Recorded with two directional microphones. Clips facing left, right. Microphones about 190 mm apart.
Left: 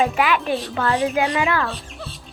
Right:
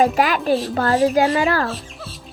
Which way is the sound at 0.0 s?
40° right (ahead or behind).